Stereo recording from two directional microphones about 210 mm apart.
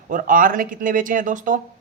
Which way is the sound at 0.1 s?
40° right (ahead or behind).